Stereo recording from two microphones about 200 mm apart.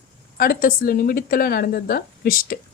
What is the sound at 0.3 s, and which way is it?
A woman's voice, 45° left (ahead or behind).